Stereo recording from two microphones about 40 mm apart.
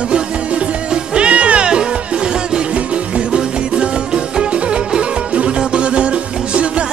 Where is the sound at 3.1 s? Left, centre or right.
Right.